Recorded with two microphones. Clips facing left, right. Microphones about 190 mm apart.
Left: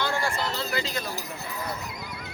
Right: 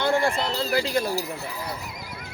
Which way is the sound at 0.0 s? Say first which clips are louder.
Right 6 dB; 55° right (ahead or behind).